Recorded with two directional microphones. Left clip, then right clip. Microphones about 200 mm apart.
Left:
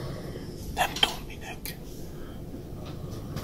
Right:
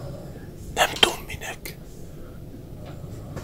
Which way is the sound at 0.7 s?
40° right (ahead or behind).